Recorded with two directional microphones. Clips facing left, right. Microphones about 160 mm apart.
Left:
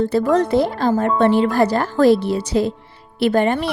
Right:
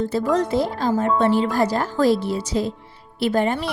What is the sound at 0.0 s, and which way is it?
Speech, 65° left (ahead or behind).